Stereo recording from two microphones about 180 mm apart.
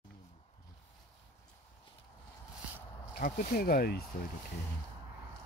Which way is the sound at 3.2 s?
55° left (ahead or behind).